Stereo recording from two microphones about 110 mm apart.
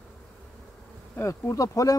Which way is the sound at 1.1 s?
25° left (ahead or behind).